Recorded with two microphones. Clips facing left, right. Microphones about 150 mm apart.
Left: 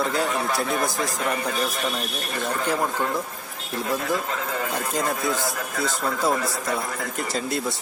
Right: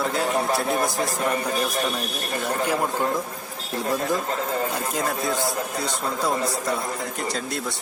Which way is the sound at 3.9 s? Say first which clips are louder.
Right 1 dB; 40° right (ahead or behind).